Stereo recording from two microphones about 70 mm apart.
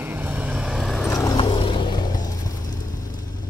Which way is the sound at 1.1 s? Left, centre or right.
Left.